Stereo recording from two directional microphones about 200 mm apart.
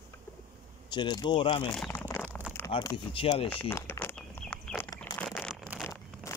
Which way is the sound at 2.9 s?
25° left (ahead or behind).